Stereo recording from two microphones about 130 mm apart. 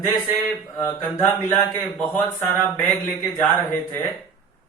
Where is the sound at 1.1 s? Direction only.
25° left (ahead or behind).